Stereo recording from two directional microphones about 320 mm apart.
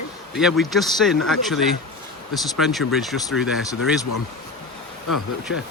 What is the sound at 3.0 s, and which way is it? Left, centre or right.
Speech, centre.